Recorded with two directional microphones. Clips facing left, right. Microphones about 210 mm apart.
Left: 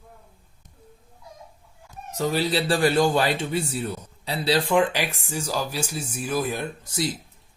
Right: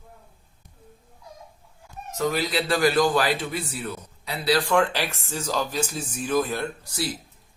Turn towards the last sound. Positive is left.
turn(degrees=20)  # may be behind; listen again after turning